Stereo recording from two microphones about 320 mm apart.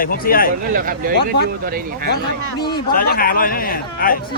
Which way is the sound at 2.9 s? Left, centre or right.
Left.